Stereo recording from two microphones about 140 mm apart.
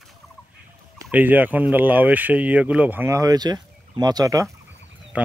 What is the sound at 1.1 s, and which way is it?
Speech, 10° right (ahead or behind).